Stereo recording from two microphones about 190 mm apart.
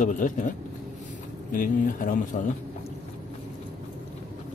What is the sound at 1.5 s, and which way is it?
Speech, 45° left (ahead or behind).